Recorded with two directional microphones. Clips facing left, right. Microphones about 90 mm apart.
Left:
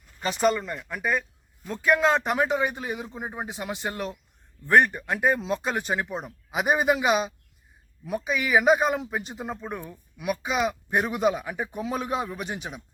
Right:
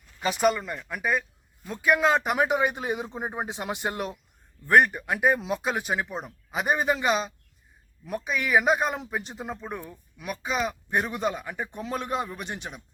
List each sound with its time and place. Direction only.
0.2 s a man's voice: 5° right (ahead or behind)
4.6 s speech: 5° right (ahead or behind)